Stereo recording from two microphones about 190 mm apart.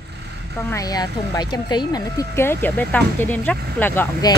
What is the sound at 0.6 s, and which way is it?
Speech, 15° left (ahead or behind).